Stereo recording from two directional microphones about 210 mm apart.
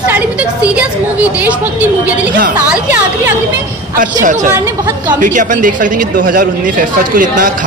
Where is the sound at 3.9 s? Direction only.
40° right (ahead or behind).